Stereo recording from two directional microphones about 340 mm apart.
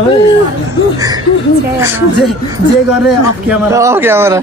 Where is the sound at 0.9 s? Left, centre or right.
Centre.